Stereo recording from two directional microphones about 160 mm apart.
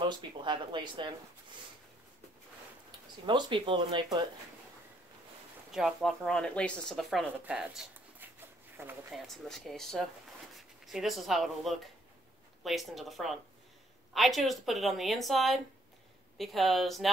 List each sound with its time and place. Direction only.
0.0 s speech: 30° right (ahead or behind)
3.3 s speech: 30° right (ahead or behind)
5.7 s speech: centre (ahead or behind)
7.3 s a sound: 10° right (ahead or behind)
9.1 s speech: centre (ahead or behind)